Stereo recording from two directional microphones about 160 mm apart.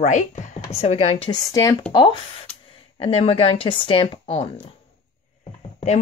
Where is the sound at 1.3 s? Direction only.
20° left (ahead or behind).